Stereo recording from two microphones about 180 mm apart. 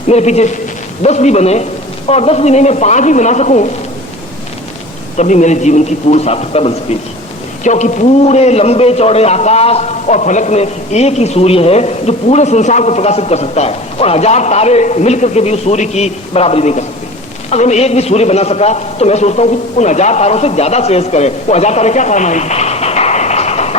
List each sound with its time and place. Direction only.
0.1 s a man's voice: 40° left (ahead or behind)
5.1 s a man's voice: 40° left (ahead or behind)